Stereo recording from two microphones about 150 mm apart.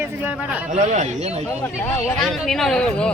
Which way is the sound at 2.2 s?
Centre (ahead or behind).